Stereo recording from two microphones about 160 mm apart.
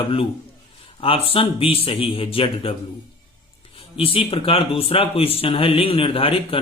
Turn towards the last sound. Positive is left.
turn(degrees=35)  # may be behind; listen again after turning